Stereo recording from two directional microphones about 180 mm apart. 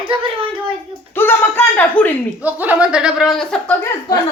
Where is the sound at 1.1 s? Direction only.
10° left (ahead or behind).